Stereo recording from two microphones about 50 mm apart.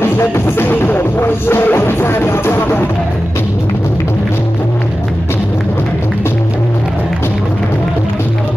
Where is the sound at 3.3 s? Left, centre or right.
Left.